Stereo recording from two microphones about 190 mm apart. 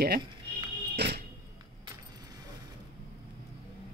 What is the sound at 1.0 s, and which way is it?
Music, 65° right (ahead or behind).